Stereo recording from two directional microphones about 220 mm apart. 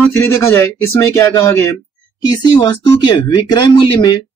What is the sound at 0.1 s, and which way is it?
Speech, 10° left (ahead or behind).